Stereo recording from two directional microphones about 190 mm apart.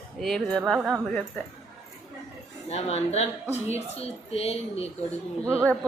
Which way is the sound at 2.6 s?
35° left (ahead or behind).